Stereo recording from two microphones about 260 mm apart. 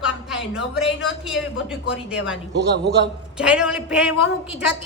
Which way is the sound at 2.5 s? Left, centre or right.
Right.